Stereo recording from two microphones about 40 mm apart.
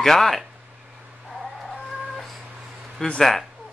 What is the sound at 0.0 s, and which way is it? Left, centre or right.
Speech, centre.